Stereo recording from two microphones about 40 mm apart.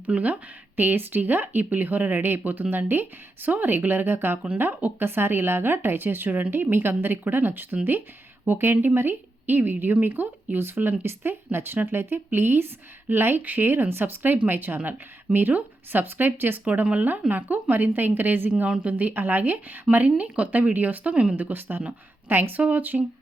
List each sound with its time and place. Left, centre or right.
0.1 s speech: right
0.8 s speech: right
8.4 s speech: right
13.4 s speech: right
14.0 s speech: right
16.8 s speech: right
17.1 s speech: right
18.8 s speech: right
20.1 s speech: right
21.3 s speech: right
22.8 s speech: right